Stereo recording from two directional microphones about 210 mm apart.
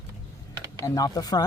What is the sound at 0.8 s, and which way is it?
Speech, 15° left (ahead or behind).